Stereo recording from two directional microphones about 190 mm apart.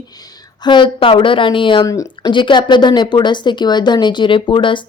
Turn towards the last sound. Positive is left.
turn(degrees=25)  # may be behind; listen again after turning